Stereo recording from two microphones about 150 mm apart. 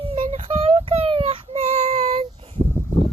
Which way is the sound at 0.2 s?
50° right (ahead or behind).